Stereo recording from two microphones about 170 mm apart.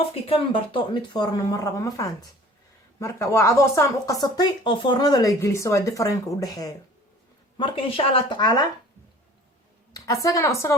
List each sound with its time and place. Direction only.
0.1 s speech: 30° left (ahead or behind)
8.4 s speech: 25° left (ahead or behind)
10.2 s speech: 20° left (ahead or behind)